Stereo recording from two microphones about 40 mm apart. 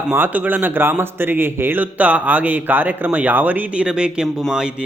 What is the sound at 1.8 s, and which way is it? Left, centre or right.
A man's voice, right.